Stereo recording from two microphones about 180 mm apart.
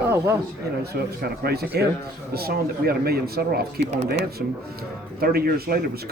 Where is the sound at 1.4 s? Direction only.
60° right (ahead or behind).